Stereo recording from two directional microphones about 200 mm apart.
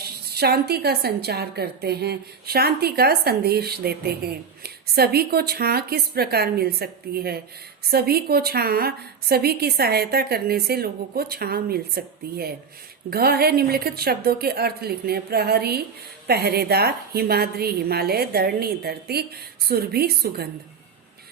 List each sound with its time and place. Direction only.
0.0 s a woman's voice: 50° right (ahead or behind)